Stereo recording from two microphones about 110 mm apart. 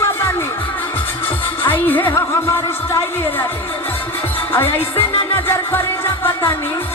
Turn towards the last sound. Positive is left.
turn(degrees=20)  # may be behind; listen again after turning